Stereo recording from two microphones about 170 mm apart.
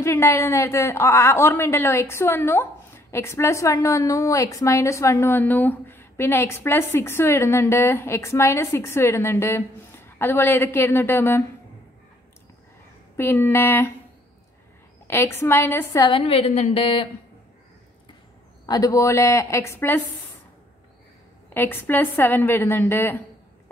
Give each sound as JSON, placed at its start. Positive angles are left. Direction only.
{"t": 0.0, "sound": "a woman's voice", "side_deg": 15}
{"t": 13.1, "sound": "a woman's voice", "side_deg": 15}
{"t": 15.0, "sound": "a woman's voice", "side_deg": 15}
{"t": 16.1, "sound": "a woman's voice", "side_deg": 35}
{"t": 18.7, "sound": "a woman's voice", "side_deg": 20}
{"t": 21.5, "sound": "a woman's voice", "side_deg": 10}